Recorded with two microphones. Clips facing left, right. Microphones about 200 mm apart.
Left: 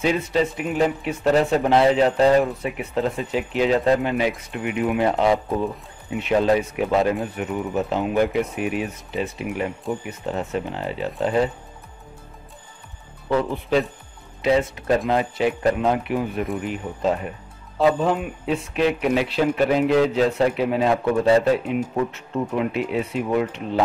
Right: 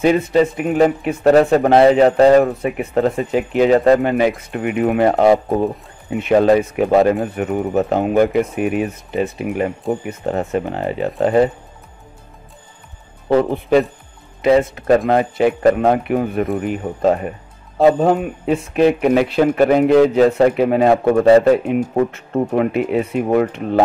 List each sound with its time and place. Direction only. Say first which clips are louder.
0.0 s speech: right 7 dB; 55° right (ahead or behind)
13.3 s speech: right 7 dB; 60° right (ahead or behind)
16.5 s speech: right 6 dB; 40° right (ahead or behind)